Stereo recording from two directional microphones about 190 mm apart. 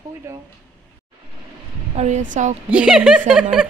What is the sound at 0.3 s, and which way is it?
Speech, 15° right (ahead or behind).